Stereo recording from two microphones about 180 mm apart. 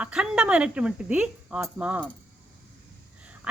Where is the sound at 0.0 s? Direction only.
5° right (ahead or behind).